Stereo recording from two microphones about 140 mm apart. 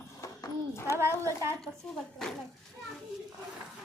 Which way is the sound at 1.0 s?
20° right (ahead or behind).